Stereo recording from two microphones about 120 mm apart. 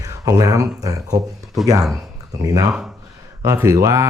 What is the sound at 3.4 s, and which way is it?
Speech, 25° right (ahead or behind).